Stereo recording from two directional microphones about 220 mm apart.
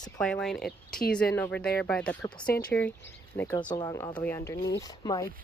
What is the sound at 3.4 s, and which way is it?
Speech, 10° left (ahead or behind).